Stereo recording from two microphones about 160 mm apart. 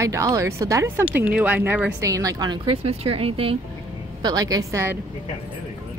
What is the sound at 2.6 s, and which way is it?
Speech, 35° right (ahead or behind).